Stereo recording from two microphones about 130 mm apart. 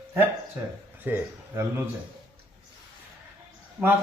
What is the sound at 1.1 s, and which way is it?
Speech, 15° right (ahead or behind).